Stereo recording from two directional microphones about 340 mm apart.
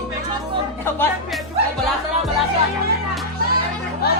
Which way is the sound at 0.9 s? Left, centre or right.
Centre.